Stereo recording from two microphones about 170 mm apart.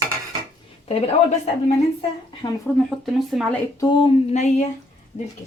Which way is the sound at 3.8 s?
30° left (ahead or behind).